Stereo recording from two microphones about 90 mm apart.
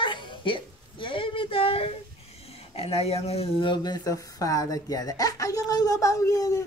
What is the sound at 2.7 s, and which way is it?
Speech, 90° left.